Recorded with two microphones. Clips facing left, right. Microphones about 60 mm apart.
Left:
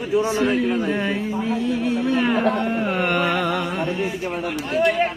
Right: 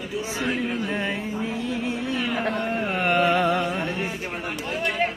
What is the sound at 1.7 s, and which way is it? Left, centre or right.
Music, right.